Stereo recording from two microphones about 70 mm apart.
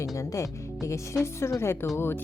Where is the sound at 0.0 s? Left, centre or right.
Left.